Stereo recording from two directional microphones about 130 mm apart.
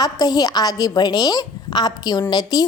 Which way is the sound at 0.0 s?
30° left (ahead or behind).